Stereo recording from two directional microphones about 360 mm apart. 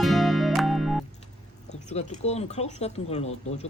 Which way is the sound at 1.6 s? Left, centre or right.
Centre.